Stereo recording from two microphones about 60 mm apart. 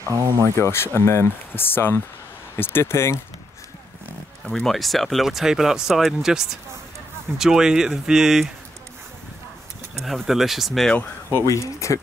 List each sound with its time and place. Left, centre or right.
0.0 s speech: right
0.6 s speech: left
1.5 s speech: left
4.6 s speech: centre
10.0 s speech: centre
11.4 s speech: left